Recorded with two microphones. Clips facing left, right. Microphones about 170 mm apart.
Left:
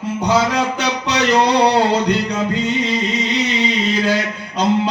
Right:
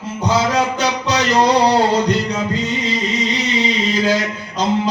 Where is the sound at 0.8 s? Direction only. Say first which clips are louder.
Right 1 dB; 60° left (ahead or behind).